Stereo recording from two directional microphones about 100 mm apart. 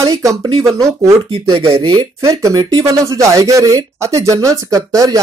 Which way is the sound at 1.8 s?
55° right (ahead or behind).